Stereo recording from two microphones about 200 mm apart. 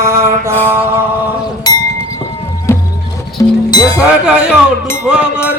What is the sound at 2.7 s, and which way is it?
Music, 15° left (ahead or behind).